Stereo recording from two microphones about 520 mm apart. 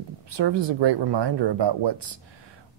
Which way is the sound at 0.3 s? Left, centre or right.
Right.